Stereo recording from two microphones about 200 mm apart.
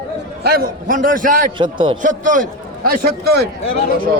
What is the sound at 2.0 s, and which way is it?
A man's voice, 40° right (ahead or behind).